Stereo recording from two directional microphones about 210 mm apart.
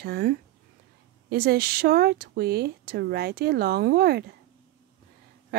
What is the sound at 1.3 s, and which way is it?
Speech, 50° right (ahead or behind).